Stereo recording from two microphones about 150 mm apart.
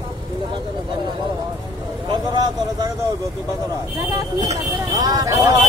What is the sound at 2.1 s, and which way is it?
Vehicle, 25° right (ahead or behind).